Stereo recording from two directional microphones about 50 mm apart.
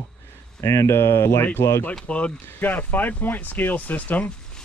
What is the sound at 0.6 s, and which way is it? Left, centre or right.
Speech, left.